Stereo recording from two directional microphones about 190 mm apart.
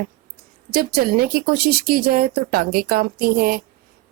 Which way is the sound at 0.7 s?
55° right (ahead or behind).